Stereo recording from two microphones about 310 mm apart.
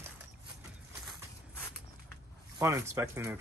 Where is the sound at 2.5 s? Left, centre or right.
Centre.